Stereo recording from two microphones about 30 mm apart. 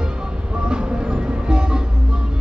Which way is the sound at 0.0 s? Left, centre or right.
Right.